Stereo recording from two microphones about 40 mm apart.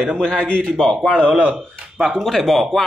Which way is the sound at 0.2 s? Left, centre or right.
Left.